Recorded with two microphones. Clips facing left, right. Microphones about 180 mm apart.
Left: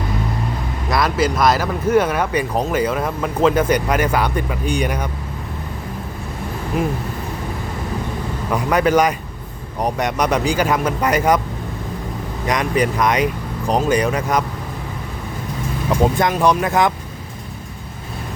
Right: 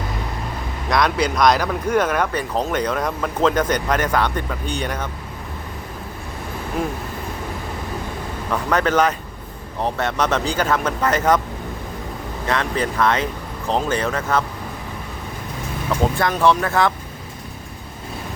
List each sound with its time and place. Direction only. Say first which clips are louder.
0.9 s speech: left 1 dB; 5° left (ahead or behind)
8.5 s speech: left 3 dB; 10° left (ahead or behind)
12.5 s speech: left 3 dB; 15° left (ahead or behind)
15.9 s speech: left 3 dB; 15° left (ahead or behind)